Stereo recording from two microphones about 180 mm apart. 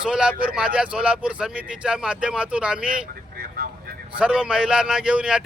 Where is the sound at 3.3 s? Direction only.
60° right (ahead or behind).